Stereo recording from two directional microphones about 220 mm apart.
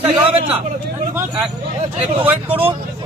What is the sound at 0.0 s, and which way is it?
Speech, 25° right (ahead or behind).